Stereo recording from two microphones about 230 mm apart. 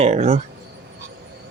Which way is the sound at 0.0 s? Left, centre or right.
Right.